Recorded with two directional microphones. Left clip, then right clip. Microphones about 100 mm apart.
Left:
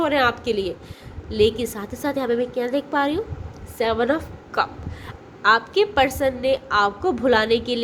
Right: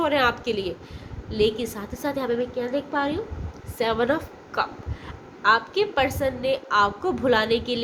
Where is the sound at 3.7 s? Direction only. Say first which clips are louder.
Left 2 dB; 30° left (ahead or behind).